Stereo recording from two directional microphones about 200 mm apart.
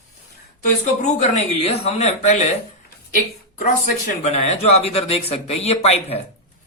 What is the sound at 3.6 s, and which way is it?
Speech, 40° left (ahead or behind).